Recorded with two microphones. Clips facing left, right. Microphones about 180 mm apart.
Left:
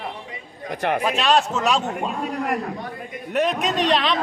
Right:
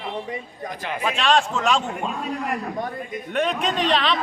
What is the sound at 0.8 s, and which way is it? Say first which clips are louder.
Speech: left 9 dB; 65° left (ahead or behind).